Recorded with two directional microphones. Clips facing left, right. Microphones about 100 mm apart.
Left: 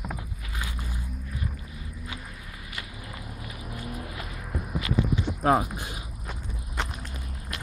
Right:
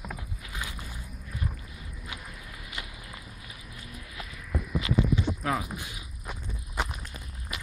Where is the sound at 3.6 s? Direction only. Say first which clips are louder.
Left 12 dB; 50° left (ahead or behind).